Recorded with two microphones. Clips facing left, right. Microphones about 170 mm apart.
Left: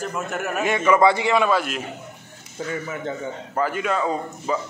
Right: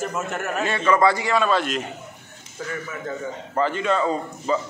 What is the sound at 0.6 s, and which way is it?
Speech, 15° left (ahead or behind).